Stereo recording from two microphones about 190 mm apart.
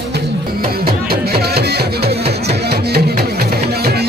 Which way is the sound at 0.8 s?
55° right (ahead or behind).